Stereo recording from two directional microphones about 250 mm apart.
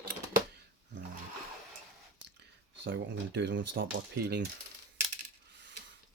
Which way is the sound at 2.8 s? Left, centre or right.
Right.